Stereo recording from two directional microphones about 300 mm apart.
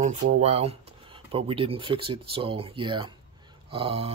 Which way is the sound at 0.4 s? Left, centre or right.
Right.